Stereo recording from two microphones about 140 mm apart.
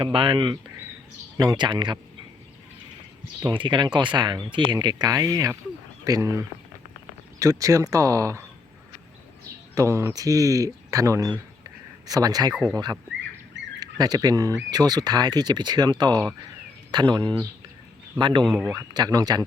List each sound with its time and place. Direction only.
0.0 s speech: 40° right (ahead or behind)
3.4 s speech: 35° right (ahead or behind)
9.7 s speech: 20° right (ahead or behind)
18.4 s speech: 5° left (ahead or behind)
18.7 s speech: 25° right (ahead or behind)